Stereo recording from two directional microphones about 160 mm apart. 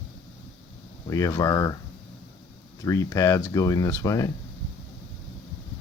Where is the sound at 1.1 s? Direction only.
20° left (ahead or behind).